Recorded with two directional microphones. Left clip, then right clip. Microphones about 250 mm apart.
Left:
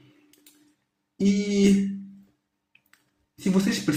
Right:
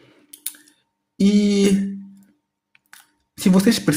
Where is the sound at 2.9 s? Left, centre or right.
Right.